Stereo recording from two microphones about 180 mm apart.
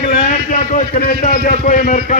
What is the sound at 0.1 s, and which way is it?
A man's voice, 50° left (ahead or behind).